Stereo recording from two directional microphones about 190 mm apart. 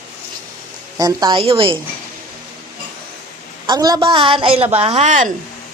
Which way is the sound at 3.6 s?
20° right (ahead or behind).